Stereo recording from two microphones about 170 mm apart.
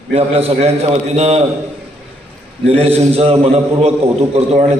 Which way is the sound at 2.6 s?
35° right (ahead or behind).